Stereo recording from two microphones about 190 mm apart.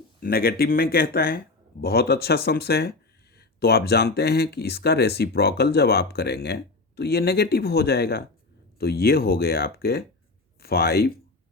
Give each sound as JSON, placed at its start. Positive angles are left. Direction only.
{"t": 0.2, "sound": "speech", "side_deg": 50}